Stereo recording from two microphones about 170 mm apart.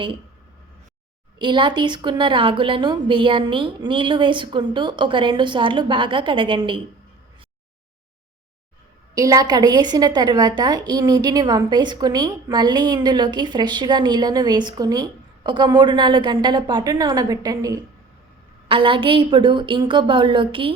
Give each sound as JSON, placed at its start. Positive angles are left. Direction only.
{"t": 1.4, "sound": "a woman's voice", "side_deg": -30}
{"t": 9.1, "sound": "a woman's voice", "side_deg": -20}